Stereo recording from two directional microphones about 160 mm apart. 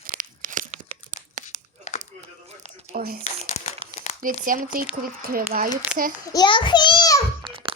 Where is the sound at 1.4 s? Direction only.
45° left (ahead or behind).